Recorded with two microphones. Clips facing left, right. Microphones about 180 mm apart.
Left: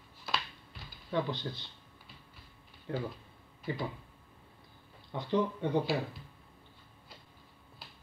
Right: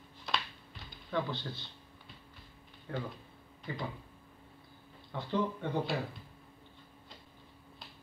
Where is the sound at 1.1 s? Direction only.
15° left (ahead or behind).